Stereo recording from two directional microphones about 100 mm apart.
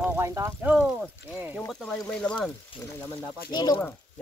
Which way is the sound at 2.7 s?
60° left (ahead or behind).